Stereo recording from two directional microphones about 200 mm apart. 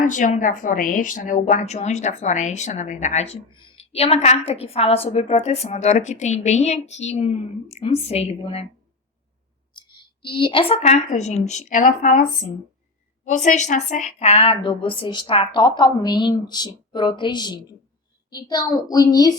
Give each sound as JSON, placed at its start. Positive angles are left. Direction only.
{"t": 0.0, "sound": "speech", "side_deg": 40}
{"t": 9.7, "sound": "a woman's voice", "side_deg": 25}